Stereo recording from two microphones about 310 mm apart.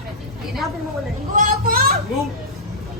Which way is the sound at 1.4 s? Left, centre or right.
Right.